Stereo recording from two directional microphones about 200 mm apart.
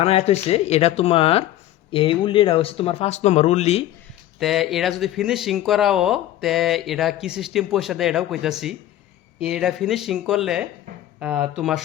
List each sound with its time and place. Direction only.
0.0 s speech: 30° left (ahead or behind)
4.4 s speech: centre (ahead or behind)